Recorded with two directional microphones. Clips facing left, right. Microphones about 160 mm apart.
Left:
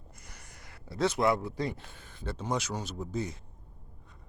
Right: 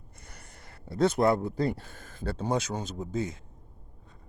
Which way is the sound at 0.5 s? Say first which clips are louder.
Right 4 dB; 55° right (ahead or behind).